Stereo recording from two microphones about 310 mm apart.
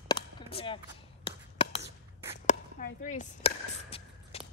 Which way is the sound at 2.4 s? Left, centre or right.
Left.